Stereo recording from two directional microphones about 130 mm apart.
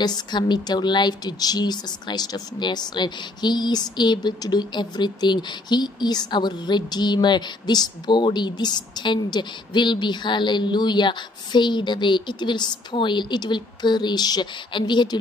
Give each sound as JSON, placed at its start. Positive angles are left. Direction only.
{"t": 0.0, "sound": "a woman's voice", "side_deg": 35}